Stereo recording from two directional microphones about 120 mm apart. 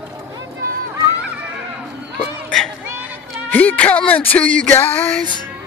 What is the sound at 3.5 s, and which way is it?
Music, 15° left (ahead or behind).